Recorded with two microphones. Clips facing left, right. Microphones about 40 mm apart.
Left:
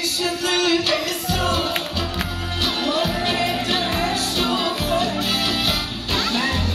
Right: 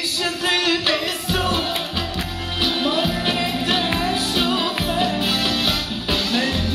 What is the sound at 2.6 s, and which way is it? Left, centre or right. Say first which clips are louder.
Music: right 1 dB; centre.